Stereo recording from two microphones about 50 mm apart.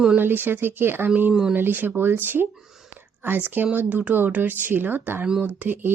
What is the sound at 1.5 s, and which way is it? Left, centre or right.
Speech, right.